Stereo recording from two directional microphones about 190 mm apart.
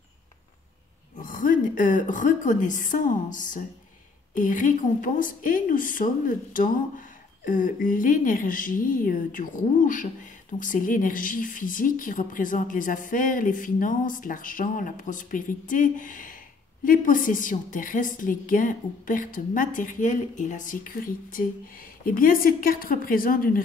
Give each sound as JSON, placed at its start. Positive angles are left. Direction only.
{"t": 1.1, "sound": "a woman's voice", "side_deg": 45}